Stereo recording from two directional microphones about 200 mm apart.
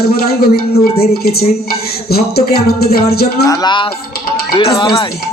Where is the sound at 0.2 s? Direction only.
50° left (ahead or behind).